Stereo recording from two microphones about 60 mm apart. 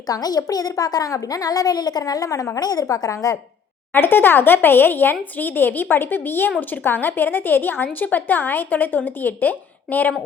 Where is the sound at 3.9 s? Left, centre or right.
Left.